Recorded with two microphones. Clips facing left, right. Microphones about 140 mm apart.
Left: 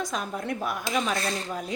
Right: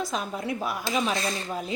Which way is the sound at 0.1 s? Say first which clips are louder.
Right 1 dB; centre (ahead or behind).